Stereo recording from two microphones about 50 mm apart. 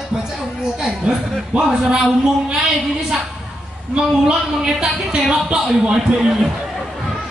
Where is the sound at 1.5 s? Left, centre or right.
Centre.